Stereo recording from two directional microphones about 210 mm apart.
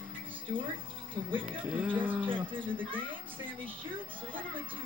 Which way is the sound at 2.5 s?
25° right (ahead or behind).